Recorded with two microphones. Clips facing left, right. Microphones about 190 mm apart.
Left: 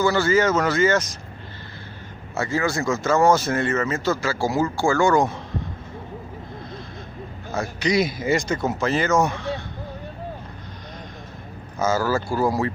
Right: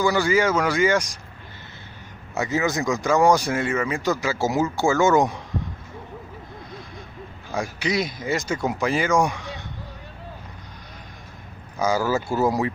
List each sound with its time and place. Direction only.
0.0 s speech: 15° right (ahead or behind)
2.3 s speech: 20° right (ahead or behind)
7.5 s speech: 10° right (ahead or behind)
7.9 s speech: centre (ahead or behind)
11.8 s speech: 15° right (ahead or behind)